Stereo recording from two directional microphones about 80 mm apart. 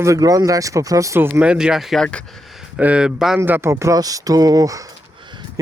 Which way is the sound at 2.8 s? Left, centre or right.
Centre.